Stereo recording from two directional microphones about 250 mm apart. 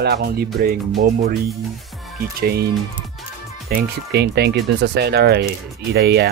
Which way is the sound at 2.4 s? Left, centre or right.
Right.